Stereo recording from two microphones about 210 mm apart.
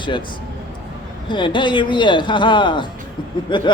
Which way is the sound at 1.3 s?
20° left (ahead or behind).